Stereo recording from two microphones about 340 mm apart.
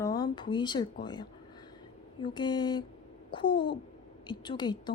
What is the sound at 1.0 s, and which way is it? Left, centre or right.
Speech, centre.